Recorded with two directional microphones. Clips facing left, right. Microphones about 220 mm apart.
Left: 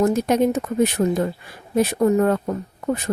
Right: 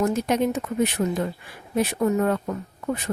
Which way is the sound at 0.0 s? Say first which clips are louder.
Left 4 dB; 40° left (ahead or behind).